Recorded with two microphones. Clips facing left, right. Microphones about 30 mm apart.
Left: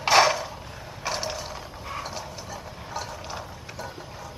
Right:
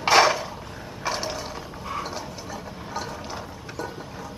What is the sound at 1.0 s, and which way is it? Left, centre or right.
Mechanisms, centre.